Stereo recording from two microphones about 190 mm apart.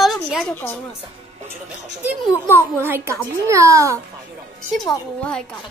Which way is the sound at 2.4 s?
10° left (ahead or behind).